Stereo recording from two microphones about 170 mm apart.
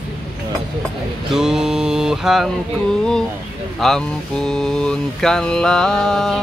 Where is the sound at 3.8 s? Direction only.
Centre (ahead or behind).